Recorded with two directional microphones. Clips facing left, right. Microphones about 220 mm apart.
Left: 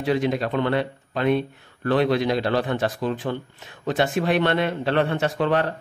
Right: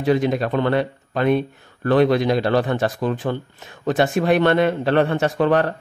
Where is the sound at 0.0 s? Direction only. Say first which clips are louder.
Right 4 dB; 45° right (ahead or behind).